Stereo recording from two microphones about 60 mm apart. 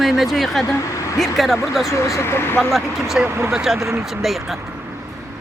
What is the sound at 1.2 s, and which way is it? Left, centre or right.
Speech, centre.